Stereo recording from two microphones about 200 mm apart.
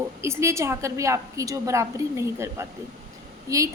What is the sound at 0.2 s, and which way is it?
A woman's voice, 15° right (ahead or behind).